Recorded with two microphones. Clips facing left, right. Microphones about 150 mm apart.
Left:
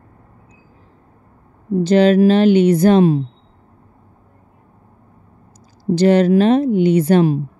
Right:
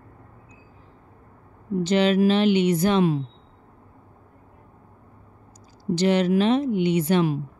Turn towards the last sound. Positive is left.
turn(degrees=35)  # may be behind; listen again after turning